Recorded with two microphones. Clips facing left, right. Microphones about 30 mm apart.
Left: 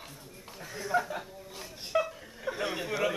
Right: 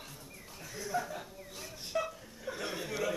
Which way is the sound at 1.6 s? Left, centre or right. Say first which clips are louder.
Left 5 dB; centre.